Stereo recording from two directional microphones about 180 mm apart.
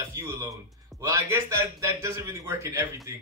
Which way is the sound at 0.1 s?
15° right (ahead or behind).